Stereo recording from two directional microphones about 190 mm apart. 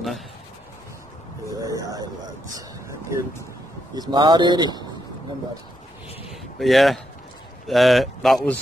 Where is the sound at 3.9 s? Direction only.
25° right (ahead or behind).